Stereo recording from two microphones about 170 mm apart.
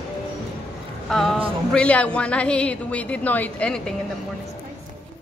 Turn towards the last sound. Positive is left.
turn(degrees=10)  # may be behind; listen again after turning